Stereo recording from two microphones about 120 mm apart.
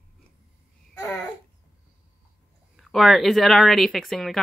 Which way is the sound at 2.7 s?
Centre (ahead or behind).